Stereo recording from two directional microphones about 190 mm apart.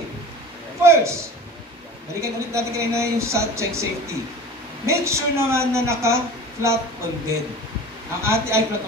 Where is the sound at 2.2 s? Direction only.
15° right (ahead or behind).